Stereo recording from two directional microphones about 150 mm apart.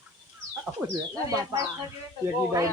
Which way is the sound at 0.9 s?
25° right (ahead or behind).